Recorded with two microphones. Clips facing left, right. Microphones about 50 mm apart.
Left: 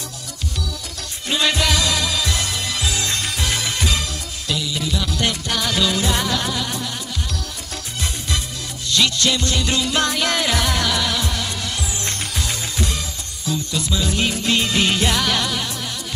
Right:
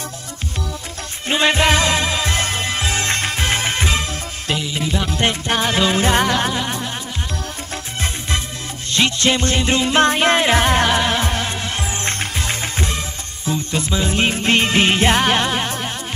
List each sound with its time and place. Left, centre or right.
1.3 s music: right
8.9 s music: right